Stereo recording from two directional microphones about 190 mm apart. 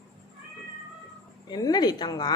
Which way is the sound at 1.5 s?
20° left (ahead or behind).